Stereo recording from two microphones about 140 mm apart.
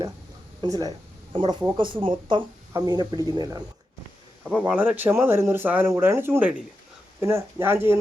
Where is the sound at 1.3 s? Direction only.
40° right (ahead or behind).